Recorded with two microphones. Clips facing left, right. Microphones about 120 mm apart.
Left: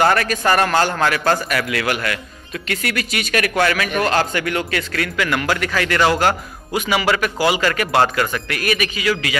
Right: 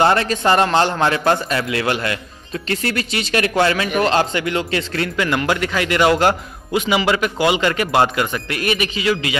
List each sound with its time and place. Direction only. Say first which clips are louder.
0.0 s a man's voice: right 1 dB; 25° right (ahead or behind)